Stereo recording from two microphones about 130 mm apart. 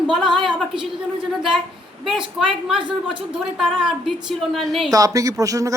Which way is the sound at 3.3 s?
5° right (ahead or behind).